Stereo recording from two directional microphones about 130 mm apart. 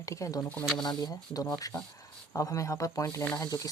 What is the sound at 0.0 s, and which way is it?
Speech, 25° left (ahead or behind).